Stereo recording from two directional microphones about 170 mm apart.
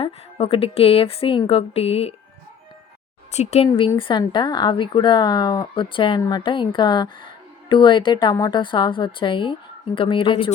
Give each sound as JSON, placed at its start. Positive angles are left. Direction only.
{"t": 0.0, "sound": "speech", "side_deg": 35}
{"t": 3.3, "sound": "speech", "side_deg": 40}